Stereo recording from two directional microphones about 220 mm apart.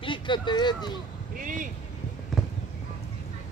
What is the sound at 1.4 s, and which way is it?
Vehicle, 35° right (ahead or behind).